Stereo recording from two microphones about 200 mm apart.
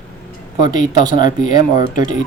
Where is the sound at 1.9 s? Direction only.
40° left (ahead or behind).